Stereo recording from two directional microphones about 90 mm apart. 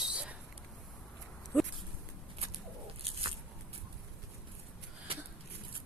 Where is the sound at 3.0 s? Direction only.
90° right.